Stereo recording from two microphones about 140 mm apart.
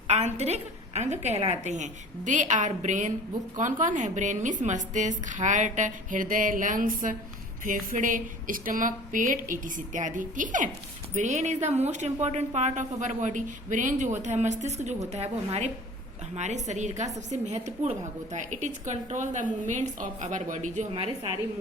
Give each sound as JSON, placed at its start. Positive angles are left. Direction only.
{"t": 0.1, "sound": "a woman's voice", "side_deg": -55}